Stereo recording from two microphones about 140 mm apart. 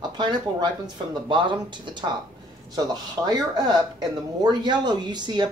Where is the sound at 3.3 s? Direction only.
30° right (ahead or behind).